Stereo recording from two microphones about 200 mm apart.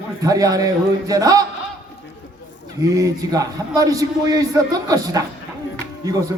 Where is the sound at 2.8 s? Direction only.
15° right (ahead or behind).